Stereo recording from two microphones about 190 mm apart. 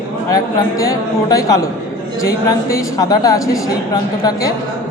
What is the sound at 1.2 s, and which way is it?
Speech, 20° left (ahead or behind).